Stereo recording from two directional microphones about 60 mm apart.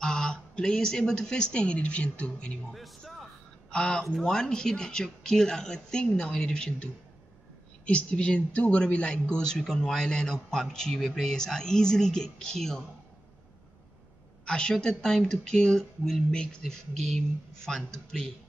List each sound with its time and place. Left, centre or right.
0.0 s a woman's voice: centre
3.7 s speech: centre
14.4 s speech: centre